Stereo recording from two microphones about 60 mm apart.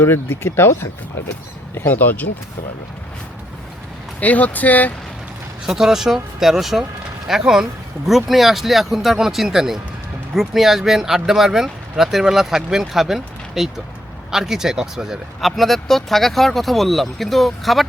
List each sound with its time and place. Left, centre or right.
0.0 s speech: left
4.2 s speech: left
5.6 s speech: centre